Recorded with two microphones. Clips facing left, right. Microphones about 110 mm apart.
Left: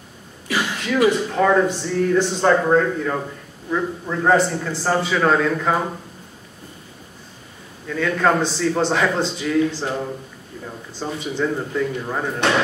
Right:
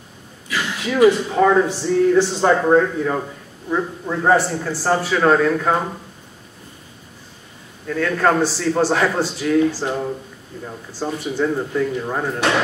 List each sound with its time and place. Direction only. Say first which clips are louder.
0.8 s a man's voice: right 4 dB; 10° right (ahead or behind)
7.9 s a man's voice: right 1 dB; centre (ahead or behind)